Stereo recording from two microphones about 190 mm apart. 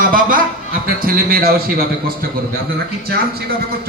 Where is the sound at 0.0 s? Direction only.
45° right (ahead or behind).